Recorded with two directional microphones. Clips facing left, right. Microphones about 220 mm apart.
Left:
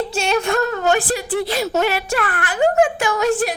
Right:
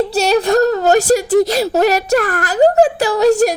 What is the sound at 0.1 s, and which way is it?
Speech, 40° right (ahead or behind).